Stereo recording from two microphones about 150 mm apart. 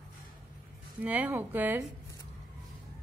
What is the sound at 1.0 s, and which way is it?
Speech, 10° right (ahead or behind).